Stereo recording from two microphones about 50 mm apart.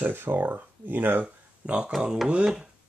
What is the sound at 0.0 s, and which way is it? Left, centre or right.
Speech, right.